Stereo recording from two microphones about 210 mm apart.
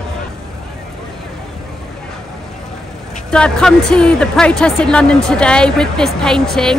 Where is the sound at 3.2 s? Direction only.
5° left (ahead or behind).